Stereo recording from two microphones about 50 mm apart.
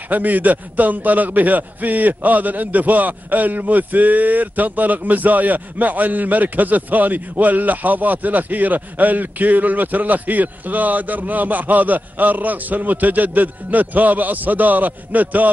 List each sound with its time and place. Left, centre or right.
0.1 s a man's voice: right